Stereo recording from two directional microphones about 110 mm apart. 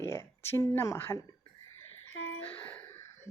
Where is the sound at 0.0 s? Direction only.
25° left (ahead or behind).